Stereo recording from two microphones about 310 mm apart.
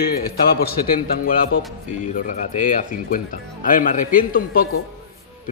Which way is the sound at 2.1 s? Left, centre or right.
Left.